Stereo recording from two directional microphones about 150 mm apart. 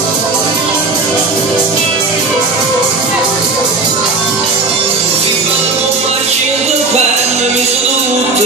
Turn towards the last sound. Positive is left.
turn(degrees=-50)  # may be behind; listen again after turning